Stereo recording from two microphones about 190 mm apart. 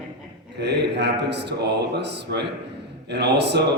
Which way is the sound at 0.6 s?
65° right (ahead or behind).